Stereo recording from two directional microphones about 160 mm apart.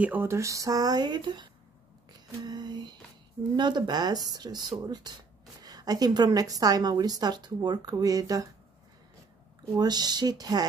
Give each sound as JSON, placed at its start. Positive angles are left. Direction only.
{"t": 0.0, "sound": "a woman's voice", "side_deg": -10}
{"t": 2.1, "sound": "lullaby", "side_deg": -25}
{"t": 3.5, "sound": "a woman's voice", "side_deg": -30}
{"t": 9.8, "sound": "a woman's voice", "side_deg": -25}